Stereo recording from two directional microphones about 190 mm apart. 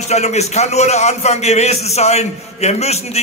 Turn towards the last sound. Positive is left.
turn(degrees=35)  # may be behind; listen again after turning